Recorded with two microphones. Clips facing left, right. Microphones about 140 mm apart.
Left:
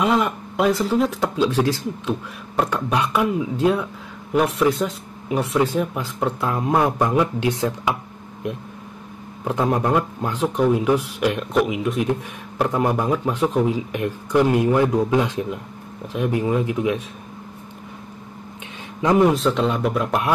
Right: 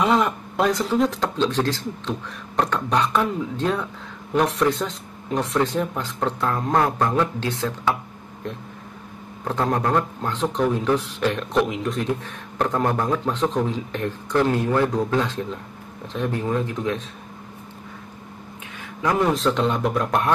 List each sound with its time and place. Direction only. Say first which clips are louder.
0.0 s speech: even; centre (ahead or behind)
9.4 s speech: left 2 dB; 10° left (ahead or behind)
18.9 s speech: left 5 dB; 20° left (ahead or behind)
19.3 s speech: left 1 dB; centre (ahead or behind)